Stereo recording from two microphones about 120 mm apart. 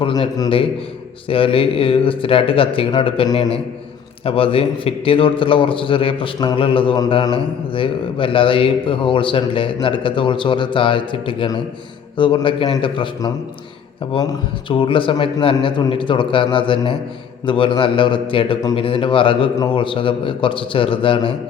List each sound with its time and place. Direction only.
0.0 s a man's voice: 45° left (ahead or behind)
14.7 s a man's voice: 45° left (ahead or behind)